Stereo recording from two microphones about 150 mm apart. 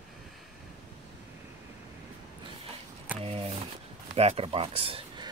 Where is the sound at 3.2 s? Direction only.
40° right (ahead or behind).